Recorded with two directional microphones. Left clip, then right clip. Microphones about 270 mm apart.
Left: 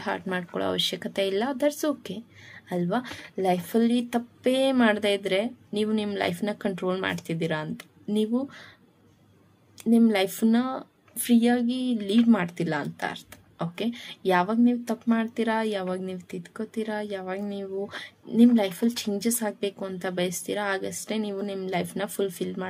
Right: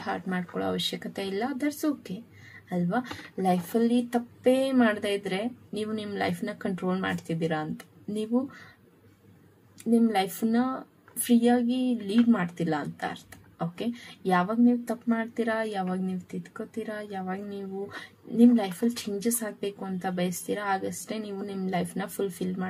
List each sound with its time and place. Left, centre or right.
0.0 s speech: left
9.8 s speech: left